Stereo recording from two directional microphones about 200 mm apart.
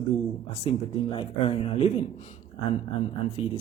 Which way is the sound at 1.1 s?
30° left (ahead or behind).